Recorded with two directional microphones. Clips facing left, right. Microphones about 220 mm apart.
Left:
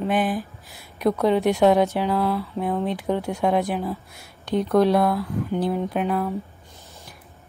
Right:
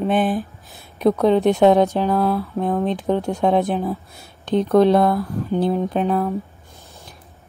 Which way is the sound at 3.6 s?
20° right (ahead or behind).